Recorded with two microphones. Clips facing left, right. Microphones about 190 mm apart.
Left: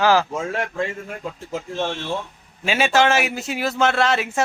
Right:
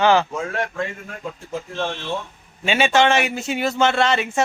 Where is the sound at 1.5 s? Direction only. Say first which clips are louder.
Left 1 dB; 15° left (ahead or behind).